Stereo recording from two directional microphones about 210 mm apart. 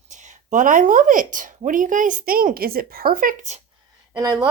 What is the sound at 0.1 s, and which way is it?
A woman's voice, 35° right (ahead or behind).